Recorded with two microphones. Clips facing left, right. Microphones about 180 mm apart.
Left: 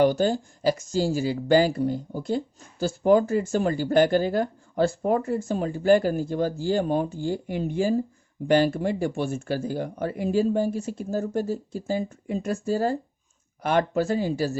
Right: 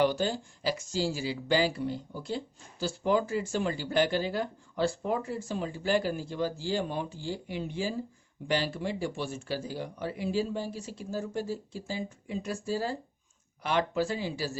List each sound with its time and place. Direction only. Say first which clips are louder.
0.0 s speech: left 6 dB; 45° left (ahead or behind)